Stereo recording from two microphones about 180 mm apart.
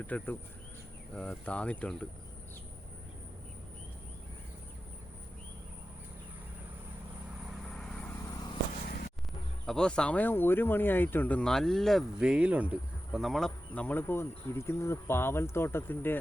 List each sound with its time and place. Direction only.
0.1 s speech: 10° left (ahead or behind)
7.7 s vehicle: 5° left (ahead or behind)
8.3 s vehicle: 25° left (ahead or behind)
9.6 s speech: 5° left (ahead or behind)